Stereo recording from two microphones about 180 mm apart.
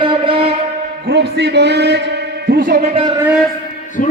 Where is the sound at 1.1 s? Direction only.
70° right (ahead or behind).